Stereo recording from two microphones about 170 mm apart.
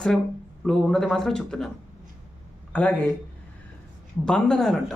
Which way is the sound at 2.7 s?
10° left (ahead or behind).